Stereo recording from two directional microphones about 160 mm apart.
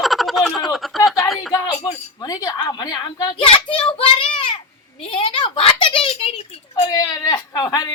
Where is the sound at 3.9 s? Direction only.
35° left (ahead or behind).